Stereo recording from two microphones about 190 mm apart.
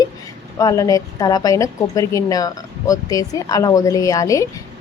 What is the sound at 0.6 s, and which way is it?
A woman's voice, 15° left (ahead or behind).